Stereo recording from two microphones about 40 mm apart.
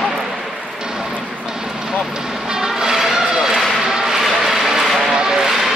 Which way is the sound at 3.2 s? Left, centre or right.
Centre.